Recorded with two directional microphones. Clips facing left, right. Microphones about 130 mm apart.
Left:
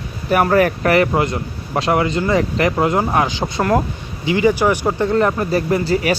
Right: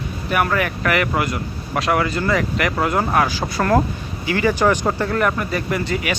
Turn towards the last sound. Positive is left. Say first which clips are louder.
# left 5 dB
turn(degrees=35)  # may be behind; listen again after turning